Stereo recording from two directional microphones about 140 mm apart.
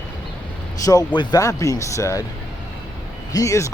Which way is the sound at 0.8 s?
25° left (ahead or behind).